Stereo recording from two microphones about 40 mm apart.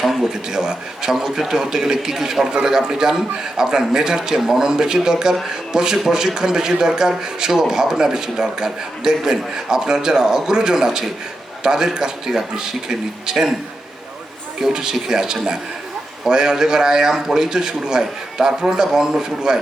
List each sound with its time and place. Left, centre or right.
0.0 s speech: centre
14.6 s speech: centre